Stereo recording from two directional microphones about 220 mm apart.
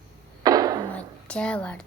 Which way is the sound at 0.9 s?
5° left (ahead or behind).